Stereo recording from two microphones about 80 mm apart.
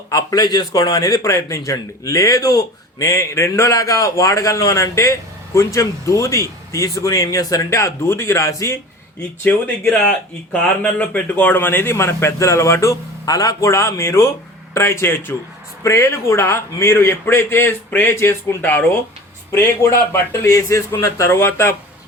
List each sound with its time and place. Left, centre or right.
0.1 s a sound: left
0.4 s a man's voice: left
9.4 s speech: left
19.5 s speech: left